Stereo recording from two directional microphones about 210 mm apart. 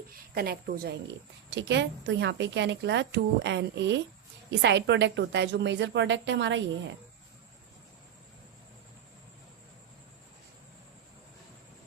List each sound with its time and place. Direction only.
0.1 s a woman's voice: 45° right (ahead or behind)